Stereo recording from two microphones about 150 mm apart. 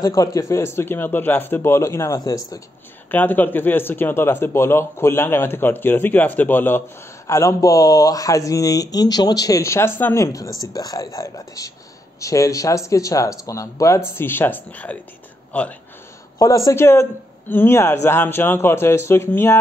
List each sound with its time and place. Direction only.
0.0 s speech: 25° left (ahead or behind)
3.1 s speech: 10° left (ahead or behind)
16.3 s speech: 25° left (ahead or behind)